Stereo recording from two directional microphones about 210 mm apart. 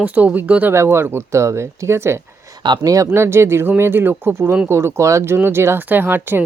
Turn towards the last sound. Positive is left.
turn(degrees=-10)  # may be behind; listen again after turning